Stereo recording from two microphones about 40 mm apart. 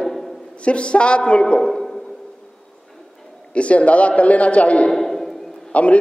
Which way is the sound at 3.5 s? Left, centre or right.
Left.